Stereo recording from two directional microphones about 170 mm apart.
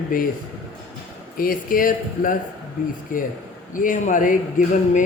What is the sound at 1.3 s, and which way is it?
Speech, 55° left (ahead or behind).